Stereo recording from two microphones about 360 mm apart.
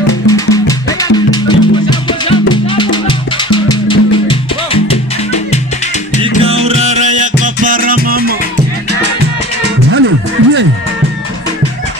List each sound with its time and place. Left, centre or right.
0.3 s music: centre
6.6 s music: centre
9.9 s music: right